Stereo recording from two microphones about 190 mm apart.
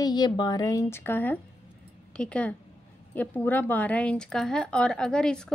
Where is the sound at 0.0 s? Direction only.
20° left (ahead or behind).